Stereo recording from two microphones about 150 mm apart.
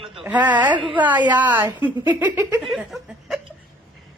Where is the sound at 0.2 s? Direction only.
10° right (ahead or behind).